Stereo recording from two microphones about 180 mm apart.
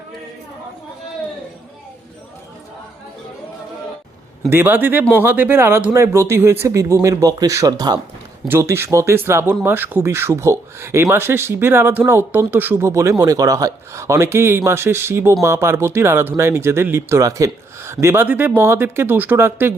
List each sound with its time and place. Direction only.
4.4 s speech: 10° right (ahead or behind)